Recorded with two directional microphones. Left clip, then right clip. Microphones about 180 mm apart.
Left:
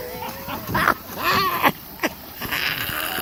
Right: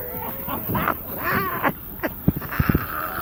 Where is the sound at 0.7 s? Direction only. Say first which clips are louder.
Left 5 dB; 30° left (ahead or behind).